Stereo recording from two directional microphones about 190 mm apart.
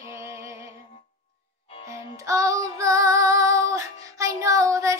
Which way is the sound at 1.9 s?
15° right (ahead or behind).